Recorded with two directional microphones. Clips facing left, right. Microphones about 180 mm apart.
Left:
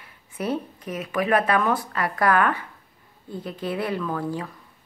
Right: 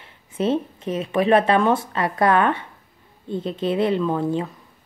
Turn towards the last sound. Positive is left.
turn(degrees=-25)  # may be behind; listen again after turning